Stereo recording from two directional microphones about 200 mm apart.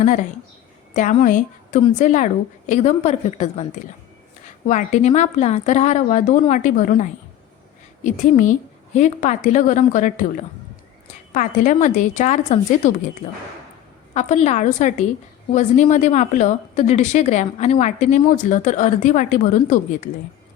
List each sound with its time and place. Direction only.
0.9 s a woman's voice: 40° left (ahead or behind)
4.7 s a woman's voice: 40° left (ahead or behind)
11.3 s a woman's voice: 40° left (ahead or behind)
14.1 s a woman's voice: 35° left (ahead or behind)